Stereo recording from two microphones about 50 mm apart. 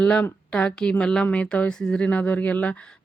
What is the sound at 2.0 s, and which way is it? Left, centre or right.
Speech, left.